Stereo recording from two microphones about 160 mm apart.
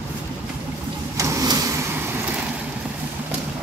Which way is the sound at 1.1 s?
20° right (ahead or behind).